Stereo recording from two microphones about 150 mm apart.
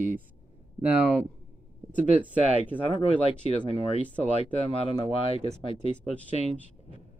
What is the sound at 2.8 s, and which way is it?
Speech, 35° left (ahead or behind).